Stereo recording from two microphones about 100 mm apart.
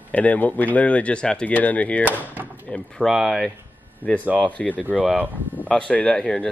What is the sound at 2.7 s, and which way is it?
Speech, 5° left (ahead or behind).